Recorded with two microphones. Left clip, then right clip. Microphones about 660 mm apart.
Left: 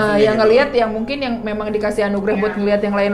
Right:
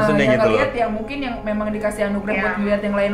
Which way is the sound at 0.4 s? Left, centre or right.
Left.